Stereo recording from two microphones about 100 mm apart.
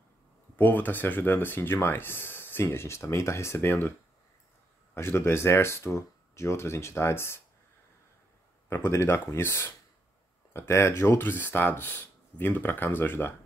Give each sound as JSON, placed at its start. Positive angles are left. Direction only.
{"t": 0.6, "sound": "speech", "side_deg": 20}
{"t": 4.9, "sound": "speech", "side_deg": 25}
{"t": 8.6, "sound": "speech", "side_deg": 25}